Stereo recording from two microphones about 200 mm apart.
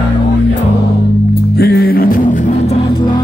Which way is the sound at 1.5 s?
50° left (ahead or behind).